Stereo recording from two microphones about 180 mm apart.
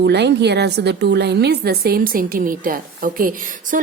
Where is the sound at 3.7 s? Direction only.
45° right (ahead or behind).